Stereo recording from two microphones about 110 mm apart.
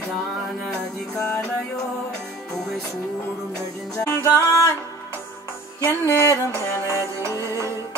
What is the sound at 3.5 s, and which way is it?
Speech, 5° left (ahead or behind).